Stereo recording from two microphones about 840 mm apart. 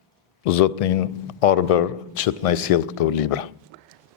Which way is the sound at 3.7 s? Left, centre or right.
Right.